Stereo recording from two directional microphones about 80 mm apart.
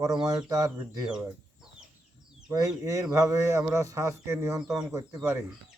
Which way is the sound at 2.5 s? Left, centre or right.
Right.